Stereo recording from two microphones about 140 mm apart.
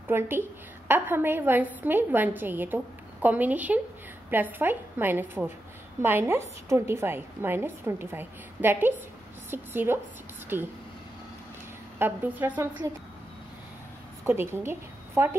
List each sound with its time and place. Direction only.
0.8 s a woman's voice: 15° right (ahead or behind)
12.0 s a woman's voice: 15° right (ahead or behind)
14.2 s a woman's voice: 15° right (ahead or behind)